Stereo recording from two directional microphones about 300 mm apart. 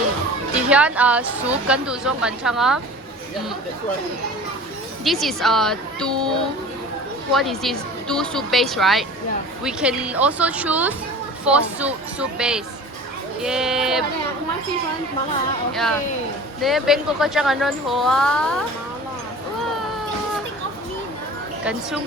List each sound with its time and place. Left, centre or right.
0.7 s speech: centre
5.0 s speech: centre
7.3 s speech: centre
15.7 s speech: centre
21.6 s speech: centre